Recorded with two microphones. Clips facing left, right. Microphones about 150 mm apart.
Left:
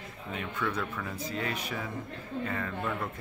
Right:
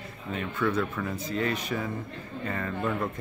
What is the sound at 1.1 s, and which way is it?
Speech, 10° left (ahead or behind).